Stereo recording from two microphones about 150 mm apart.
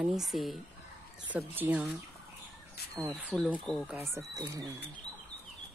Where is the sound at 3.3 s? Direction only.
10° right (ahead or behind).